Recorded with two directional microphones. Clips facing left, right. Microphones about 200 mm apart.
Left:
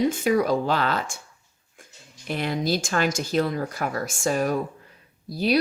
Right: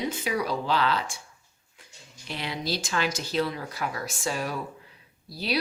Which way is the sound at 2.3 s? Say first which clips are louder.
Left 7 dB; 50° left (ahead or behind).